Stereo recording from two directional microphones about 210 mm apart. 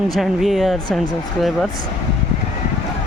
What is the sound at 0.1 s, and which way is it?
Speech, centre (ahead or behind).